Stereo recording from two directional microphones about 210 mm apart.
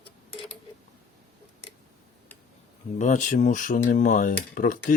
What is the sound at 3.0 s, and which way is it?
Speech, 35° left (ahead or behind).